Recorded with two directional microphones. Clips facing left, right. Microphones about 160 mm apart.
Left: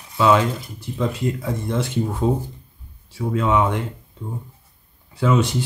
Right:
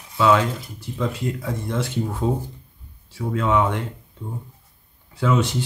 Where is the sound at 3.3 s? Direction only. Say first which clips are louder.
Left 1 dB; 10° left (ahead or behind).